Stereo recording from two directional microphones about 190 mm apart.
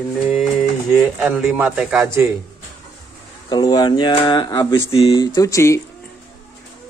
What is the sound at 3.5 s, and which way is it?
Speech, 20° left (ahead or behind).